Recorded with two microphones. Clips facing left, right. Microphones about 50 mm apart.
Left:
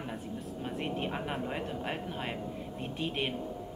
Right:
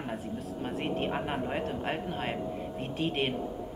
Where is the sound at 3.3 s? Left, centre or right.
Centre.